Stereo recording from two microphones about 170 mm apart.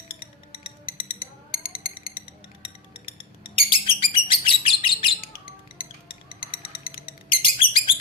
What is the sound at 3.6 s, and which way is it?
Bird, 30° left (ahead or behind).